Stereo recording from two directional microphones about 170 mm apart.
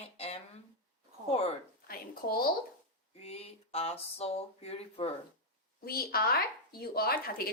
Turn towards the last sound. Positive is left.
turn(degrees=60)  # may be behind; listen again after turning